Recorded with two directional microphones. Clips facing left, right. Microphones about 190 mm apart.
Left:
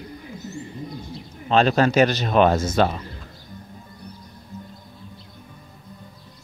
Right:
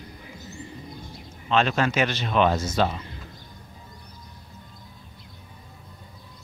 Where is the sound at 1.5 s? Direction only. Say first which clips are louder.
Left 5 dB; 35° left (ahead or behind).